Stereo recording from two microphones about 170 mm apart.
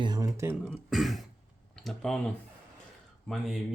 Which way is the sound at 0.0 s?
25° right (ahead or behind).